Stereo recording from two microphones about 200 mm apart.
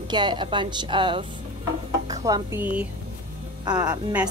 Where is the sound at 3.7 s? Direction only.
20° right (ahead or behind).